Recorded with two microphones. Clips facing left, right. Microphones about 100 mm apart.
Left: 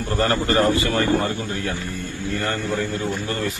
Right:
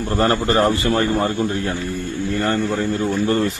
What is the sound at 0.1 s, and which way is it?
Speech, 30° right (ahead or behind).